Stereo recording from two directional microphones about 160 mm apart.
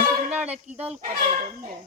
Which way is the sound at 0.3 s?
10° right (ahead or behind).